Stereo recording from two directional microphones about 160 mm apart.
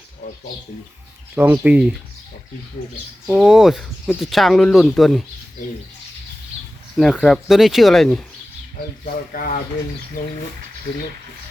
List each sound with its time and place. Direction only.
1.4 s speech: 10° right (ahead or behind)
3.2 s speech: 5° right (ahead or behind)
6.9 s speech: centre (ahead or behind)
9.3 s speech: 65° left (ahead or behind)